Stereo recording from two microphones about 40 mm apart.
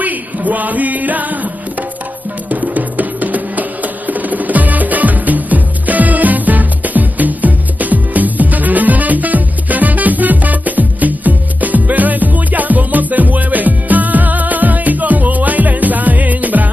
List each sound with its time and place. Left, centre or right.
0.0 s music: right